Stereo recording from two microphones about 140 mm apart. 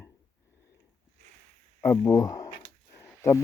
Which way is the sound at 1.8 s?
20° left (ahead or behind).